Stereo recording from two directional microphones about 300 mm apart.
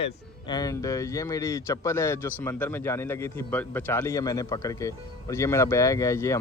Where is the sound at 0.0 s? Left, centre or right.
Centre.